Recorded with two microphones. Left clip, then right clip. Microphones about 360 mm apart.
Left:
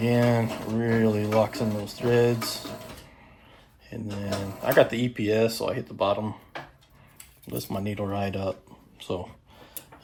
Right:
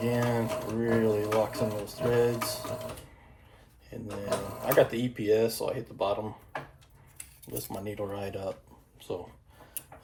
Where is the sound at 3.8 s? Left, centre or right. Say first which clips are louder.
Left 2 dB; left.